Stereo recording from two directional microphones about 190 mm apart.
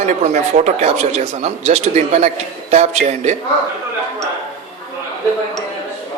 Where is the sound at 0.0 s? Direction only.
35° right (ahead or behind).